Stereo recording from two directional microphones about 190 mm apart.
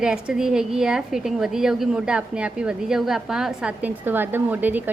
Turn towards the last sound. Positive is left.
turn(degrees=-10)  # may be behind; listen again after turning